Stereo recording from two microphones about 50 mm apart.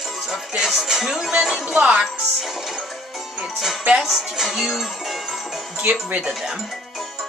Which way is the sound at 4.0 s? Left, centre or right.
Centre.